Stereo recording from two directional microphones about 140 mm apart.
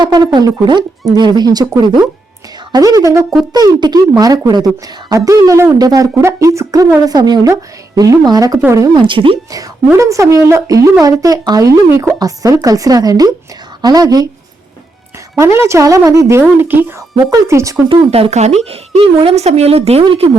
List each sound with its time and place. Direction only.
0.0 s speech: 30° right (ahead or behind)
9.0 s speech: 35° right (ahead or behind)
9.9 s speech: 20° right (ahead or behind)
15.4 s speech: 20° right (ahead or behind)
17.8 s speech: 45° right (ahead or behind)